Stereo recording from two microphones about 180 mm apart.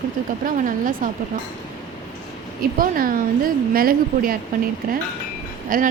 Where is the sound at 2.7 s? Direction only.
50° right (ahead or behind).